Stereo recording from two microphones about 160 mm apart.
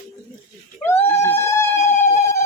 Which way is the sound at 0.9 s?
15° left (ahead or behind).